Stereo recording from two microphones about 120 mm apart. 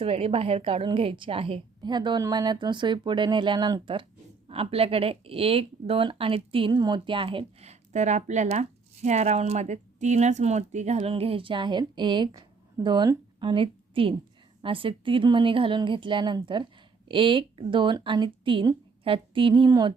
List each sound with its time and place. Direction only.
0.0 s speech: 55° right (ahead or behind)
1.8 s speech: 35° right (ahead or behind); by 11.1 s 70° right (ahead or behind)
11.1 s a woman's voice: 50° right (ahead or behind)